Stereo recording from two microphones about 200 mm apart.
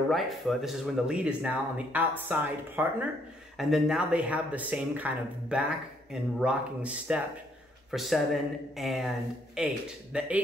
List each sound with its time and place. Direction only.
0.1 s speech: centre (ahead or behind)